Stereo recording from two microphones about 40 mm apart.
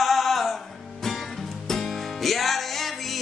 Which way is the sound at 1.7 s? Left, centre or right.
Centre.